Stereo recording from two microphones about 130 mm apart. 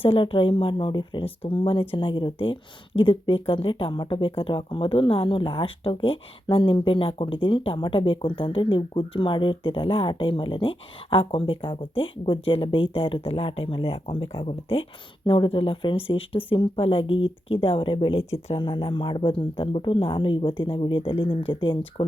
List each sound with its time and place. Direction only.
0.0 s speech: 45° left (ahead or behind)